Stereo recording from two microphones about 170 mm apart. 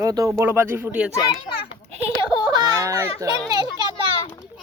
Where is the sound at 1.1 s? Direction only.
25° left (ahead or behind).